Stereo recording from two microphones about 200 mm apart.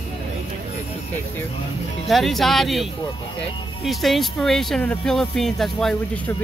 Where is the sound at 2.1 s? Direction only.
Centre (ahead or behind).